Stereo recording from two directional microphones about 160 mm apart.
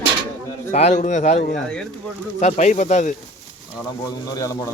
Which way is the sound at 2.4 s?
50° left (ahead or behind).